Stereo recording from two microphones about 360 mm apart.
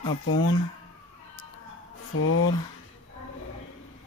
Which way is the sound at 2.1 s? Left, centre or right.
Left.